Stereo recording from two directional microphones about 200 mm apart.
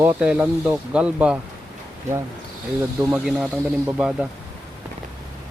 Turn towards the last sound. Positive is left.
turn(degrees=-5)  # may be behind; listen again after turning